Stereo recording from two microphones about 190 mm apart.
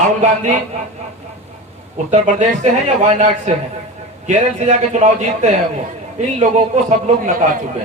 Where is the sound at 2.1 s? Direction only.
40° right (ahead or behind).